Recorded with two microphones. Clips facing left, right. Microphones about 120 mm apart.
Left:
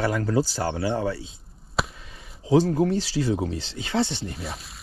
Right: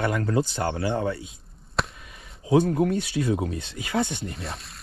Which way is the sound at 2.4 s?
30° left (ahead or behind).